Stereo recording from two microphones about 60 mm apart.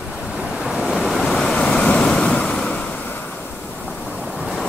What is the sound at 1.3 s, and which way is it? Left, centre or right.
Waves, centre.